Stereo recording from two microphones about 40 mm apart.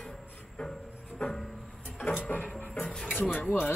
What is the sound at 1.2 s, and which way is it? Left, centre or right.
Music, left.